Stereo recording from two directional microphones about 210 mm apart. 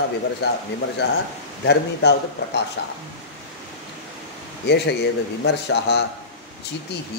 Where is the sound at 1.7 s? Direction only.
55° left (ahead or behind).